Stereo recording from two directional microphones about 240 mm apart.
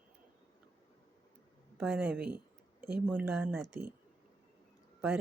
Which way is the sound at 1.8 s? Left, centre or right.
Centre.